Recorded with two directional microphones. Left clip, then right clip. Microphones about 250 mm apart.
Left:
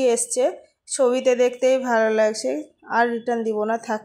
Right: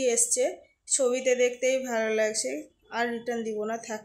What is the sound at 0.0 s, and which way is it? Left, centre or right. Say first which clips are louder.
A woman's voice: left 6 dB; centre.